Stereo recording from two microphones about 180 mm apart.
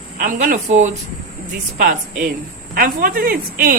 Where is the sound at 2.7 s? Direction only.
50° right (ahead or behind).